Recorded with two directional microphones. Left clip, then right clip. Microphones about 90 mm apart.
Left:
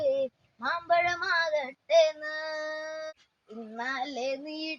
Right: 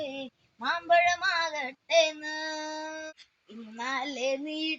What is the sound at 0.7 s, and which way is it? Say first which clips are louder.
Child singing: right 3 dB; 25° left (ahead or behind).